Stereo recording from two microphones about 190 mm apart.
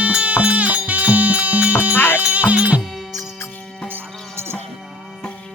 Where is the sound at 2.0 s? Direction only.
10° left (ahead or behind).